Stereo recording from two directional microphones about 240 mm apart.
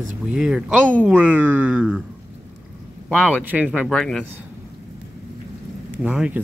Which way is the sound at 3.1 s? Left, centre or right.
Centre.